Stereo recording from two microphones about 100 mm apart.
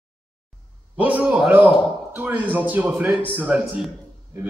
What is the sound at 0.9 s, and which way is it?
A man's voice, 15° right (ahead or behind).